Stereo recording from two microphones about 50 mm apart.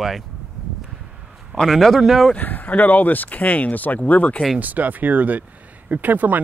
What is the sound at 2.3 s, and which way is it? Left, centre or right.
Speech, left.